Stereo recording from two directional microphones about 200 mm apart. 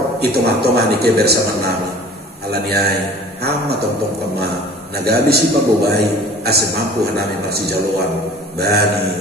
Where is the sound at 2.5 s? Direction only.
55° right (ahead or behind).